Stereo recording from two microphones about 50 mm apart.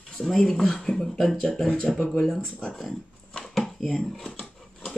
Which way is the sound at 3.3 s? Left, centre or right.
Centre.